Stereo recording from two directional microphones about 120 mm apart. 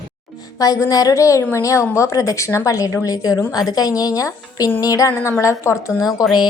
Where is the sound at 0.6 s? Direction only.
30° left (ahead or behind).